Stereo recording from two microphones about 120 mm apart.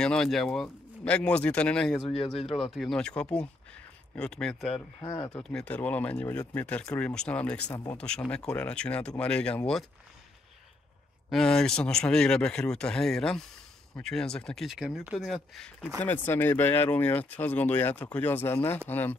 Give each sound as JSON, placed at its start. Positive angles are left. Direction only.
{"t": 0.0, "sound": "speech", "side_deg": 5}
{"t": 2.0, "sound": "speech", "side_deg": 50}
{"t": 2.7, "sound": "speech", "side_deg": 5}
{"t": 5.0, "sound": "speech", "side_deg": 35}
{"t": 5.4, "sound": "speech", "side_deg": 10}
{"t": 11.2, "sound": "speech", "side_deg": 5}
{"t": 16.0, "sound": "speech", "side_deg": 15}